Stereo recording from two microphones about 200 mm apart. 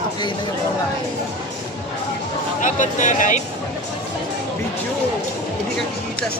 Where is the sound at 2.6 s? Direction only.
40° left (ahead or behind).